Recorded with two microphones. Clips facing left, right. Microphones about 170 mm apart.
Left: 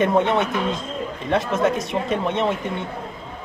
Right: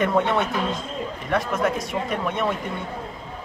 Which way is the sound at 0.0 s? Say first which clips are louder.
Left 3 dB; 20° left (ahead or behind).